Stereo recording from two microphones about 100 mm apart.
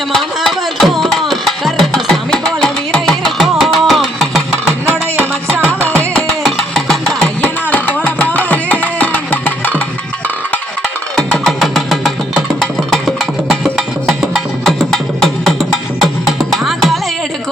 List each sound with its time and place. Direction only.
0.1 s music: 5° left (ahead or behind)
5.8 s music: 10° left (ahead or behind)
6.4 s a sound: centre (ahead or behind)
7.4 s music: 15° left (ahead or behind)
11.2 s music: 5° left (ahead or behind)